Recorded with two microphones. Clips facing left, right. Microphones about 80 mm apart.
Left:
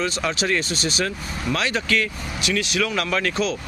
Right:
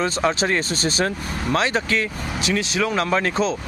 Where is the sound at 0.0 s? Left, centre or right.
Right.